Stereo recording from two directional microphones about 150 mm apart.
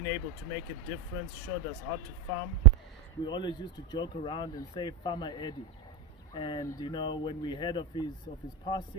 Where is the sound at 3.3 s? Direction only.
30° left (ahead or behind).